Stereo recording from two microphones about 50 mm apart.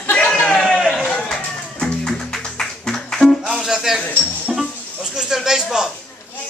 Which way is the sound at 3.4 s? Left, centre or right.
Centre.